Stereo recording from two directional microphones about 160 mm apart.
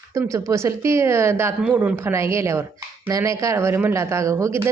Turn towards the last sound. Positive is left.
turn(degrees=-15)  # may be behind; listen again after turning